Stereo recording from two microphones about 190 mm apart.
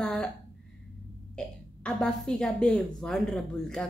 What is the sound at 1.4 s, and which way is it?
A woman's voice, 5° left (ahead or behind).